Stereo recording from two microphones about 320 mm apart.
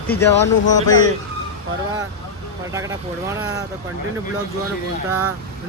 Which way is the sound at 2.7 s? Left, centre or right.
Centre.